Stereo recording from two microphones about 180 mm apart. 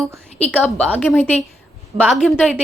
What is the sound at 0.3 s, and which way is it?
A woman's voice, 5° left (ahead or behind).